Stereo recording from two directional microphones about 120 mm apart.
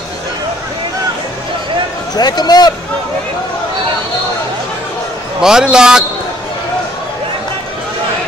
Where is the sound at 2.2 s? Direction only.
35° left (ahead or behind).